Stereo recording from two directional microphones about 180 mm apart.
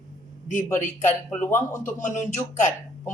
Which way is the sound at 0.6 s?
10° left (ahead or behind).